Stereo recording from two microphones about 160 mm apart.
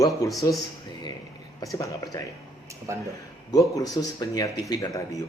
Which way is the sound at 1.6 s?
20° left (ahead or behind).